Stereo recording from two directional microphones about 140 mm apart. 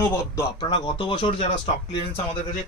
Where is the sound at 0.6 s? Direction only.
35° left (ahead or behind).